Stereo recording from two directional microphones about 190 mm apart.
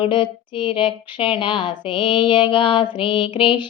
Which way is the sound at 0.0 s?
25° left (ahead or behind).